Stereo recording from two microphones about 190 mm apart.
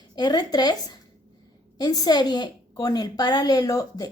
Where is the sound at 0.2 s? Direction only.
20° left (ahead or behind).